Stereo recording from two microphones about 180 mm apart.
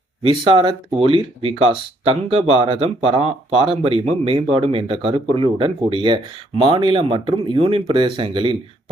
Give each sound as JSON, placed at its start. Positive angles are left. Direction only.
{"t": 0.2, "sound": "speech", "side_deg": -30}